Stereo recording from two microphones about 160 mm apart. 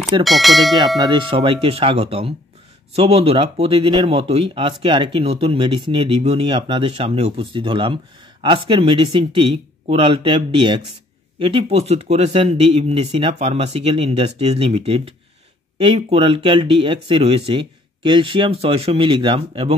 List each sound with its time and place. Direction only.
0.2 s speech: centre (ahead or behind)
0.9 s speech: 30° right (ahead or behind)